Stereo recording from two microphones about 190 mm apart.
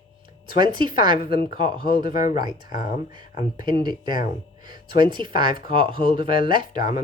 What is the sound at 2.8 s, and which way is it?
Speech, 45° left (ahead or behind).